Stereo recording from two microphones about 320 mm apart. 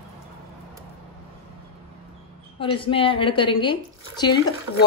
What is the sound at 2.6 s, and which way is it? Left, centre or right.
Speech, centre.